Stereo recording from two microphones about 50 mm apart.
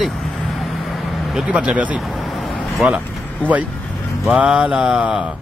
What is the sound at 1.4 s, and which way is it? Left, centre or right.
Speech, right.